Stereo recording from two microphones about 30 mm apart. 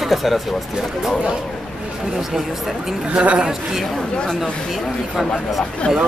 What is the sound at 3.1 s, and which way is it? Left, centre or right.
Speech, right.